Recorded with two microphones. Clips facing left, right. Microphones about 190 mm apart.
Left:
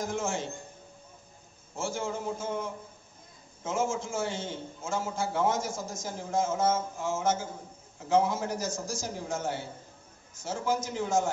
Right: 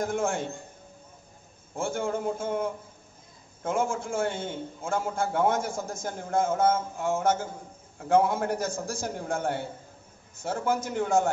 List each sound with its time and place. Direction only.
0.0 s a man's voice: 55° right (ahead or behind)
1.8 s a man's voice: 55° right (ahead or behind)